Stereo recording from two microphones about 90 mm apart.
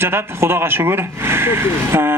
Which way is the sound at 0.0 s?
25° right (ahead or behind).